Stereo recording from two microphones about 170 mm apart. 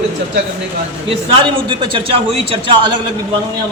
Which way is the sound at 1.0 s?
30° right (ahead or behind).